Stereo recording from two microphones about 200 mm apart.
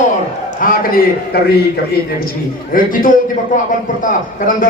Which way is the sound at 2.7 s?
45° left (ahead or behind).